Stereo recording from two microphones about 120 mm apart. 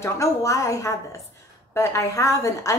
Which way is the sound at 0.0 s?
25° left (ahead or behind).